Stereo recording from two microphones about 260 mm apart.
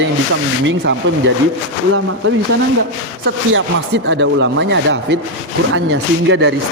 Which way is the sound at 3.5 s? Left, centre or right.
Right.